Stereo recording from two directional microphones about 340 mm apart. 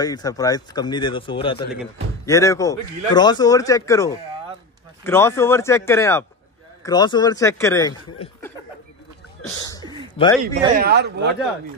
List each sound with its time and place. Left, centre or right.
0.0 s a man's voice: centre
9.6 s a sound: centre
10.1 s a man's voice: centre
10.8 s speech: right